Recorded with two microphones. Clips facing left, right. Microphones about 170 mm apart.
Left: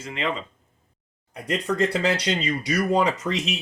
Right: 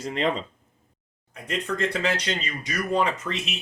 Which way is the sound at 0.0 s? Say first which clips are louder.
Right 3 dB; 40° right (ahead or behind).